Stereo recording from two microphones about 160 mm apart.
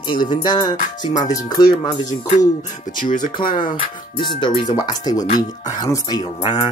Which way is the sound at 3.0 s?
50° left (ahead or behind).